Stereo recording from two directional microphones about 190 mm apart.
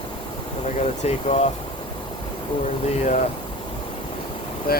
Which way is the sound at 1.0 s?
35° left (ahead or behind).